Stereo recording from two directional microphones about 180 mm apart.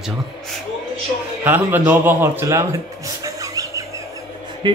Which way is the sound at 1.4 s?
10° right (ahead or behind).